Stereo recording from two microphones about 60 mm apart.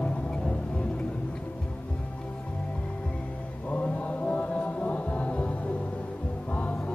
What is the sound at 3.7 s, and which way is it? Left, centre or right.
Chant, left.